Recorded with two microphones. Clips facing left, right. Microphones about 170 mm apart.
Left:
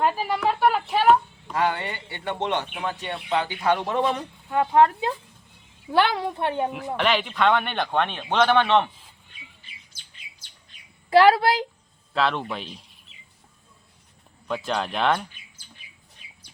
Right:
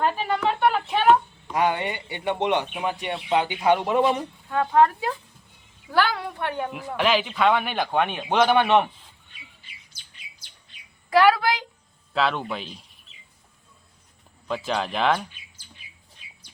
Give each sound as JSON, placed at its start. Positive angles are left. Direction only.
{"t": 0.0, "sound": "a sound", "side_deg": 5}
{"t": 1.5, "sound": "a man's voice", "side_deg": -15}
{"t": 4.4, "sound": "a woman's voice", "side_deg": 15}
{"t": 6.9, "sound": "a man's voice", "side_deg": -5}
{"t": 11.1, "sound": "a woman's voice", "side_deg": 30}
{"t": 12.1, "sound": "speech", "side_deg": 0}
{"t": 14.4, "sound": "speech", "side_deg": 0}